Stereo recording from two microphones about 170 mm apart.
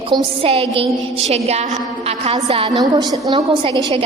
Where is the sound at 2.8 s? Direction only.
20° right (ahead or behind).